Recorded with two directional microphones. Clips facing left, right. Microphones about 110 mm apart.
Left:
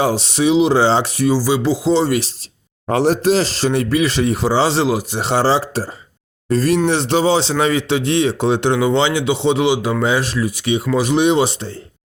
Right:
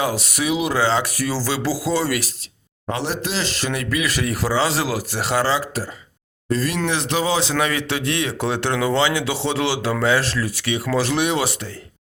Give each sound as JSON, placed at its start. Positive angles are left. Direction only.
{"t": 0.0, "sound": "speech", "side_deg": 30}
{"t": 2.9, "sound": "speech", "side_deg": 45}